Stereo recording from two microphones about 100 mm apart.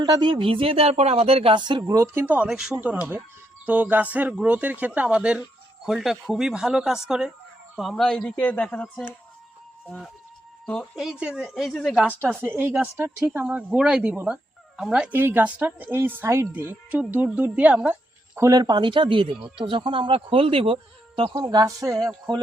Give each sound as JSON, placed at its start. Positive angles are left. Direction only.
{"t": 0.0, "sound": "speech", "side_deg": -50}
{"t": 1.5, "sound": "speech", "side_deg": -50}
{"t": 1.9, "sound": "a woman's voice", "side_deg": -30}
{"t": 2.2, "sound": "speech", "side_deg": -15}
{"t": 2.8, "sound": "speech", "side_deg": -15}
{"t": 10.9, "sound": "speech", "side_deg": -5}
{"t": 12.3, "sound": "speech", "side_deg": -20}
{"t": 15.1, "sound": "speech", "side_deg": -20}
{"t": 16.9, "sound": "speech", "side_deg": -15}
{"t": 18.3, "sound": "speech", "side_deg": -35}
{"t": 21.3, "sound": "a woman's voice", "side_deg": -40}